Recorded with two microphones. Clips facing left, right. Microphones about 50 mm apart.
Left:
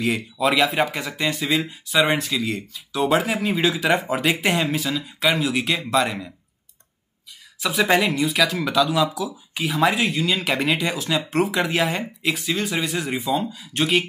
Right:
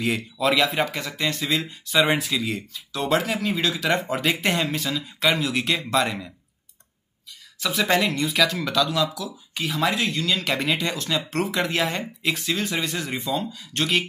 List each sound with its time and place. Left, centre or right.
0.0 s speech: centre
7.6 s speech: centre